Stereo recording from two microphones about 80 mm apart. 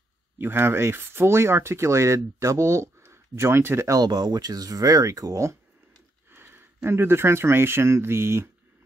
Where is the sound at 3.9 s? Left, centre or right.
Right.